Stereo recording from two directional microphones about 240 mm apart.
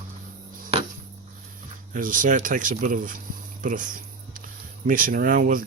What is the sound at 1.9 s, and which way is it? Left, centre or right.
Speech, right.